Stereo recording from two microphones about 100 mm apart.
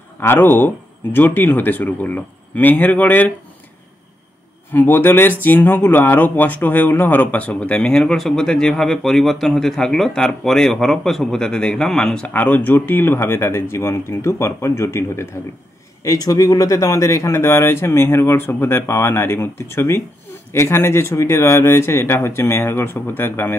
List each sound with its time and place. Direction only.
0.2 s speech: 20° left (ahead or behind)
4.7 s speech: 20° left (ahead or behind); by 12.3 s 5° left (ahead or behind)
12.3 s speech: 15° left (ahead or behind)
16.0 s speech: 40° left (ahead or behind); by 23.6 s 20° left (ahead or behind)